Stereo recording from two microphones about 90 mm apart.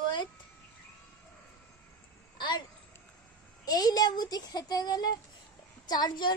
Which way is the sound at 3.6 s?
45° left (ahead or behind).